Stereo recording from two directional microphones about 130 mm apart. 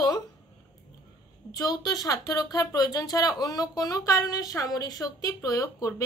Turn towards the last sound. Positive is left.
turn(degrees=25)  # may be behind; listen again after turning